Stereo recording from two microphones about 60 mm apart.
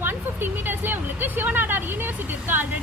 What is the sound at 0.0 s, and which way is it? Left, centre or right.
Speech, right.